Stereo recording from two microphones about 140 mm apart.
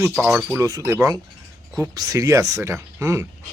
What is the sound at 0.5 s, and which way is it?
Speech, 25° right (ahead or behind).